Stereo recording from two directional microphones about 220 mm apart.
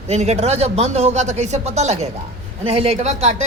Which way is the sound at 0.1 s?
30° right (ahead or behind).